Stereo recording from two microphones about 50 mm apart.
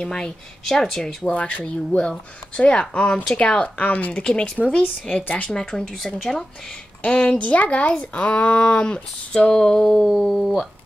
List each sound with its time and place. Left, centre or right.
0.0 s speech: centre
1.3 s speech: left
2.0 s speech: centre
3.6 s speech: left
4.2 s speech: centre
5.1 s speech: left
5.6 s speech: centre
7.0 s speech: left
9.5 s speech: centre